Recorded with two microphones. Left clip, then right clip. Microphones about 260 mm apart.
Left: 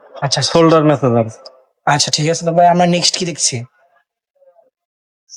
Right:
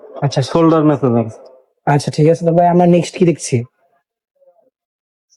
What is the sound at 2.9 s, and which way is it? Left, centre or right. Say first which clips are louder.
Speech: right 2 dB; centre.